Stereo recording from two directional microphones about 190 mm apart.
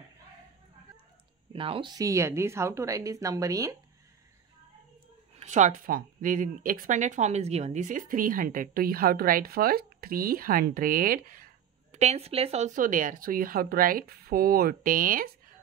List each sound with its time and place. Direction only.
1.5 s speech: 30° right (ahead or behind)
5.4 s speech: 40° right (ahead or behind)